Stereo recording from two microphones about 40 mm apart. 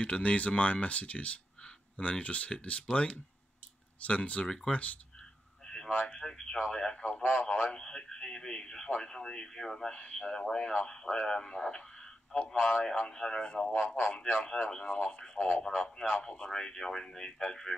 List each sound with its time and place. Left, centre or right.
0.0 s speech: left
5.7 s a man's voice: left
9.8 s speech: left
14.0 s speech: left
15.4 s speech: centre